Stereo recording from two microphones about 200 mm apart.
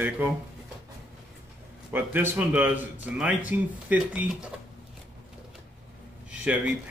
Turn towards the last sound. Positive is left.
turn(degrees=-5)  # may be behind; listen again after turning